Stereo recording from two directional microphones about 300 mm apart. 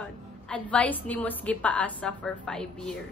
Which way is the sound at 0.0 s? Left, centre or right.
Centre.